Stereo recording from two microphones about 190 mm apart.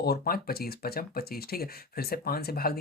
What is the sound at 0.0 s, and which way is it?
Speech, 55° left (ahead or behind).